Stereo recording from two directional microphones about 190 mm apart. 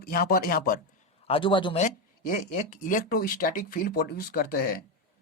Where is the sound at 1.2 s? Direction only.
30° left (ahead or behind).